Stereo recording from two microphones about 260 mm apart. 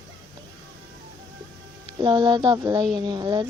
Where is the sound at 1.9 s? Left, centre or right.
Centre.